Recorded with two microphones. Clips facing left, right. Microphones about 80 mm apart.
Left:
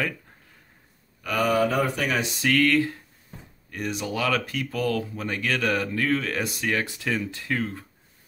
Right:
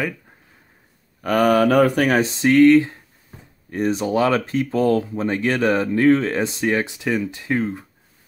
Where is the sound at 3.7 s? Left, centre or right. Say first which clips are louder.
Right 9 dB; right.